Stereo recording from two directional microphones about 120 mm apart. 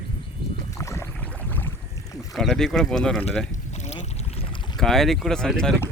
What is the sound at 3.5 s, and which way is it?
Boat, 70° left (ahead or behind).